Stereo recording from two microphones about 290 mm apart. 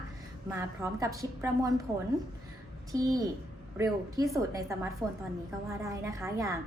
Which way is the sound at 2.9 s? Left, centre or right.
Centre.